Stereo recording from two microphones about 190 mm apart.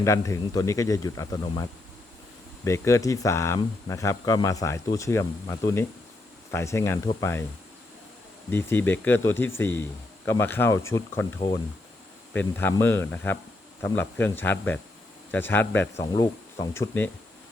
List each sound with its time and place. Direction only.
0.0 s speech: 15° left (ahead or behind)
2.6 s speech: 15° left (ahead or behind)
8.4 s speech: 10° left (ahead or behind)
12.3 s speech: 10° left (ahead or behind)